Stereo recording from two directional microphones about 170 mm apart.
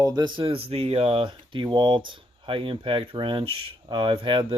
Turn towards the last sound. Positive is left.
turn(degrees=-30)  # may be behind; listen again after turning